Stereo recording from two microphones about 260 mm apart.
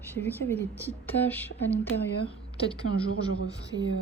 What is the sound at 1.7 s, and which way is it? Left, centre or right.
Speech, left.